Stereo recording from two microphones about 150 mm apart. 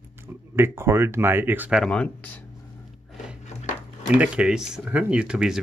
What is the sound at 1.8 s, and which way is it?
Speech, 10° left (ahead or behind).